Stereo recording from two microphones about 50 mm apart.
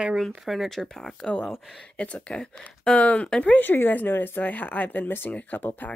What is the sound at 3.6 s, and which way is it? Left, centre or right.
Speech, left.